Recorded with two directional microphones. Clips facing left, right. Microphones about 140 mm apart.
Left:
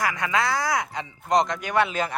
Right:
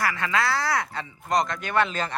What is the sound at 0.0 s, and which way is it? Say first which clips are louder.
Speech: left 1 dB; 15° left (ahead or behind).